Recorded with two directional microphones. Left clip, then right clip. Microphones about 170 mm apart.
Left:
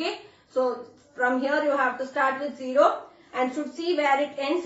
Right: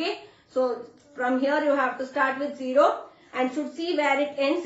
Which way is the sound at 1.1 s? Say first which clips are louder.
Even; 20° right (ahead or behind).